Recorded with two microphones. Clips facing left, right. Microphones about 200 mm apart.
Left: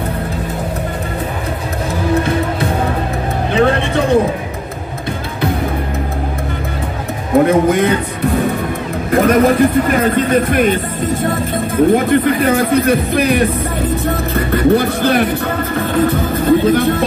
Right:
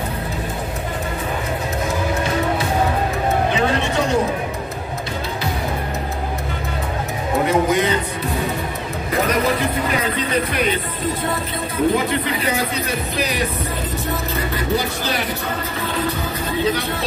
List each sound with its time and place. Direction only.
3.5 s music: 55° left (ahead or behind)
7.4 s music: 55° left (ahead or behind)
9.1 s speech: 50° left (ahead or behind)